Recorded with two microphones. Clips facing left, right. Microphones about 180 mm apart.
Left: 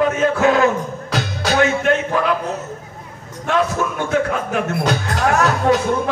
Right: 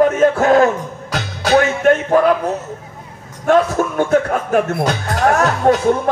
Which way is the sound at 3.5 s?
45° right (ahead or behind).